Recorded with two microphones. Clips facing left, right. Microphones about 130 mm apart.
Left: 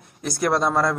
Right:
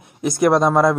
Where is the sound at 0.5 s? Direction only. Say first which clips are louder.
Right 4 dB; 15° right (ahead or behind).